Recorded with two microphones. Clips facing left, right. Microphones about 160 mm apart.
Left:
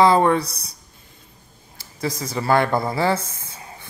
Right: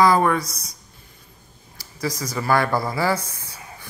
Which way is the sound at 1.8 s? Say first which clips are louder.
Left 1 dB; 25° left (ahead or behind).